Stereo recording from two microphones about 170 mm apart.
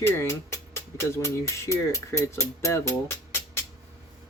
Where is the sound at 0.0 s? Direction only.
15° left (ahead or behind).